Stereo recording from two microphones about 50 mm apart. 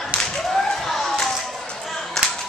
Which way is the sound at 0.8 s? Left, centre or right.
Centre.